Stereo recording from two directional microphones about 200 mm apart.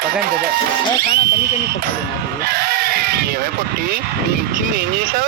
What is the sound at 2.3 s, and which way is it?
Speech, 50° right (ahead or behind).